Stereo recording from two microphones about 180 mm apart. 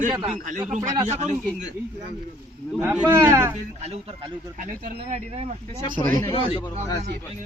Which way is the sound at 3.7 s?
35° right (ahead or behind).